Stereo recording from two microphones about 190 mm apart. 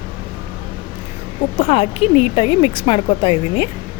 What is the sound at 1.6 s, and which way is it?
Speech, 30° left (ahead or behind).